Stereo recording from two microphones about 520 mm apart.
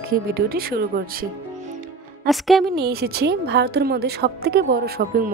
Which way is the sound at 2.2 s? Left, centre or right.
Centre.